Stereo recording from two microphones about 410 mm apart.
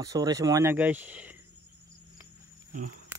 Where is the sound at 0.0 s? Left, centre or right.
Centre.